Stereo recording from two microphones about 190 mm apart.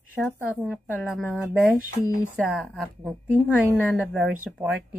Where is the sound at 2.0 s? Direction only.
15° left (ahead or behind).